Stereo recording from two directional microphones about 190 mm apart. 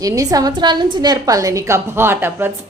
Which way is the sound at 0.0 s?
20° right (ahead or behind).